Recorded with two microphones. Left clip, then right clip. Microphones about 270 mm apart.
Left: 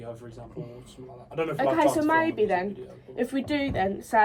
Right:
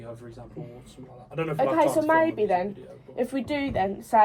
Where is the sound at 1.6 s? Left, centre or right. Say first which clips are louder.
Right 1 dB; centre.